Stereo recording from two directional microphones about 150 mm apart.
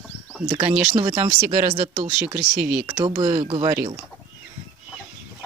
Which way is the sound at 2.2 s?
5° right (ahead or behind).